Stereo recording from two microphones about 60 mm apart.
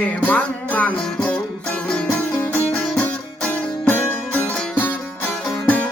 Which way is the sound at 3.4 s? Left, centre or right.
Left.